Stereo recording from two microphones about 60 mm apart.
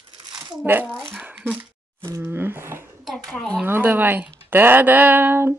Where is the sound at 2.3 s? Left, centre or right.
Right.